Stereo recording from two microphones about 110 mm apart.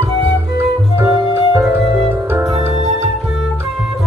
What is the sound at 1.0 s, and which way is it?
Music, 25° right (ahead or behind).